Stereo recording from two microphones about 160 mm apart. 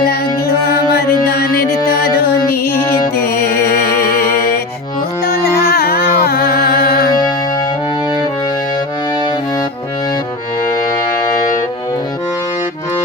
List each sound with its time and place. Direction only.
0.9 s music: 70° left (ahead or behind)